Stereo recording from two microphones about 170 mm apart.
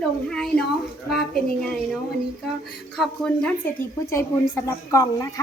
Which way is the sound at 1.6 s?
Centre (ahead or behind).